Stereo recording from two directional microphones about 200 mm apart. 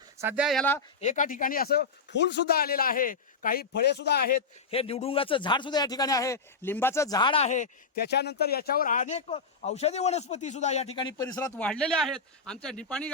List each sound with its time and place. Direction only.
0.2 s speech: 10° right (ahead or behind)
1.0 s speech: 40° left (ahead or behind)
4.7 s a man's voice: 30° left (ahead or behind)
8.0 s speech: 55° left (ahead or behind); by 13.1 s 5° left (ahead or behind)